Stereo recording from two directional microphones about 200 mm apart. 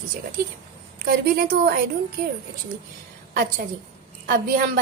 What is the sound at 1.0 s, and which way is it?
Speech, 50° right (ahead or behind).